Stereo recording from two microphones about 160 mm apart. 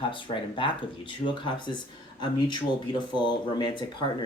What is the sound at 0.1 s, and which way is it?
Speech, 30° left (ahead or behind).